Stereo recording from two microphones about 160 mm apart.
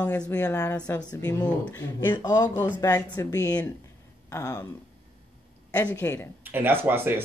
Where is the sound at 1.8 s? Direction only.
20° left (ahead or behind).